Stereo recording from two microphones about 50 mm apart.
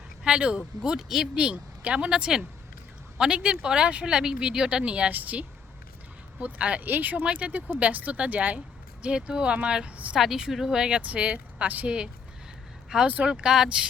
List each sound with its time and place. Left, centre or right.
0.3 s speech: right
0.8 s speech: centre
1.4 s speech: right
6.8 s speech: right
7.2 s speech: right
10.2 s speech: centre; by 11.9 s right
12.9 s speech: centre